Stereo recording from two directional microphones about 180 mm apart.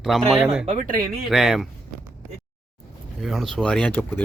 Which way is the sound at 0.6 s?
45° right (ahead or behind).